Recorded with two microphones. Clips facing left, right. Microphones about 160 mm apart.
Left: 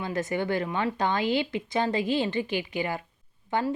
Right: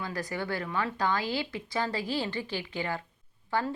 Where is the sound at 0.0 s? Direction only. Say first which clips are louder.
Left 6 dB; 20° left (ahead or behind).